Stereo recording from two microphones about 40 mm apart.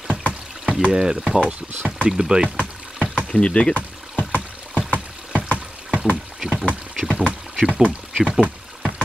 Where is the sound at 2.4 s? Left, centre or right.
Right.